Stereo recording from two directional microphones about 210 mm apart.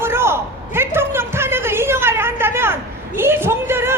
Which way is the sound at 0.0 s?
10° right (ahead or behind).